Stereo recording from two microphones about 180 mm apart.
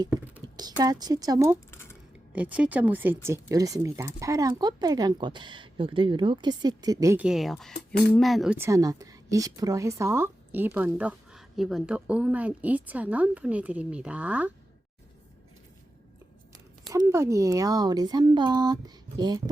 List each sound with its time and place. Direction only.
0.4 s speech: 20° right (ahead or behind)
1.7 s a sound: 15° left (ahead or behind)
2.3 s speech: 10° right (ahead or behind)
7.2 s speech: 5° right (ahead or behind)
8.5 s a woman's voice: 15° right (ahead or behind)
16.9 s speech: 15° right (ahead or behind)